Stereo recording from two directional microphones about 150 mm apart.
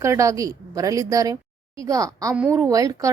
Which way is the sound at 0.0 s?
20° right (ahead or behind).